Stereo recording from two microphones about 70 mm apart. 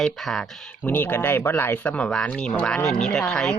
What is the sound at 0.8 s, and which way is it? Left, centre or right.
Speech, left.